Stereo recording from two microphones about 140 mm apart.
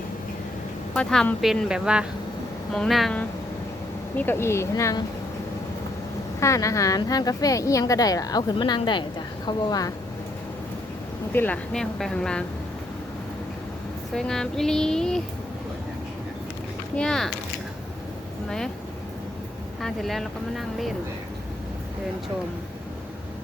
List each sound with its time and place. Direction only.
0.9 s speech: 5° left (ahead or behind)
4.2 s a woman's voice: 15° left (ahead or behind)
6.4 s a woman's voice: 20° left (ahead or behind)
11.3 s a woman's voice: 15° left (ahead or behind)
14.1 s speech: 5° left (ahead or behind)
17.0 s speech: 5° left (ahead or behind)
18.4 s speech: 5° left (ahead or behind)
19.8 s speech: centre (ahead or behind)